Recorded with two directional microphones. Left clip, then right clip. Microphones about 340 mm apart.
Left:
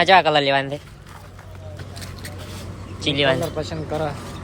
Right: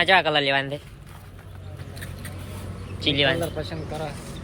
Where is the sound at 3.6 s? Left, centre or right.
Left.